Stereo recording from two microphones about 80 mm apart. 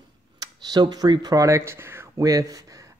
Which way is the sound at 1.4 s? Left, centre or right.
Right.